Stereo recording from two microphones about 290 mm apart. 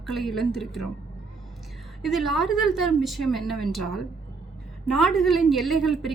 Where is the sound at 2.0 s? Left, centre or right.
Centre.